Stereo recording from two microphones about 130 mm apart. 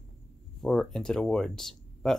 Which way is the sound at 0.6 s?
5° left (ahead or behind).